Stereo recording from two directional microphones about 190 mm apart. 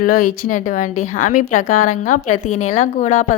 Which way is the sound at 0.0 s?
45° left (ahead or behind).